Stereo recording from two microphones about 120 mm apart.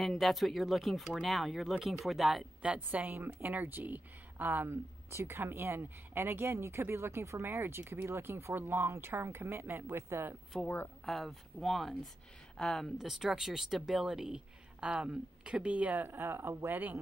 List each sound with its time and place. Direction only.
0.0 s speech: centre (ahead or behind); by 10.3 s 20° right (ahead or behind)
10.5 s speech: centre (ahead or behind); by 17.0 s 15° right (ahead or behind)